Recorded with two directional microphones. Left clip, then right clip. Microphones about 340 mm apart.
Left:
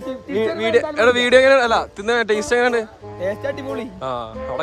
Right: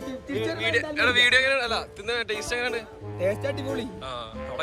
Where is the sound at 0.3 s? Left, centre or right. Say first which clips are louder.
Left 8 dB; left.